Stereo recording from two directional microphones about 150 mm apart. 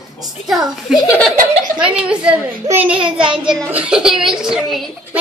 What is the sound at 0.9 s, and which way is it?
Speech, 25° left (ahead or behind).